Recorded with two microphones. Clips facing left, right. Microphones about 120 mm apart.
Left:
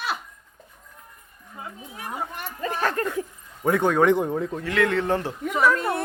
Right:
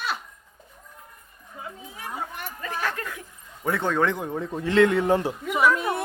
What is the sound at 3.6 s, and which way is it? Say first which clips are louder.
Speech: left 5 dB; 10° left (ahead or behind).